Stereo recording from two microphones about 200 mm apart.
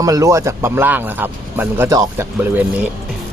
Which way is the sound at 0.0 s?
15° right (ahead or behind).